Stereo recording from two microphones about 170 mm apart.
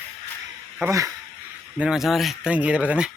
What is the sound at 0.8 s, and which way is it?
Speech, 15° right (ahead or behind).